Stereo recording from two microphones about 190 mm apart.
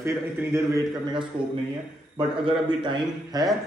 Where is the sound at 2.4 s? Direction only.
25° right (ahead or behind).